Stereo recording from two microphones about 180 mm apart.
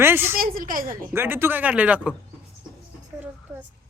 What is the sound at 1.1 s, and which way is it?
Speech, 15° right (ahead or behind).